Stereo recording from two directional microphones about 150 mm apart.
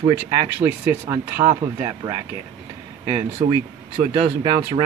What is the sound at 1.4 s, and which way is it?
Speech, 35° right (ahead or behind).